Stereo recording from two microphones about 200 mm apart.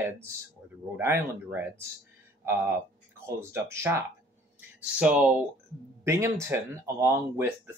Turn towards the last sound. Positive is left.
turn(degrees=-10)  # may be behind; listen again after turning